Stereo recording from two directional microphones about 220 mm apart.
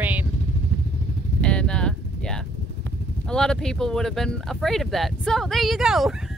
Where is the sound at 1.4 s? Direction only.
5° left (ahead or behind).